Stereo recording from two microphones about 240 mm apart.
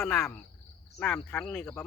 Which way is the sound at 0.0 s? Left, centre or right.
Centre.